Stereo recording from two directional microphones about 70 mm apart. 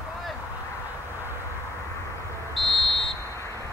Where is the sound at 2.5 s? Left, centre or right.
Centre.